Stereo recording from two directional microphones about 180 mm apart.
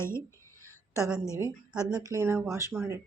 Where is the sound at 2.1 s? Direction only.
15° right (ahead or behind).